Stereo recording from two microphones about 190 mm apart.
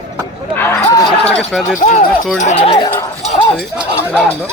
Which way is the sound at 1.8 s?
40° left (ahead or behind).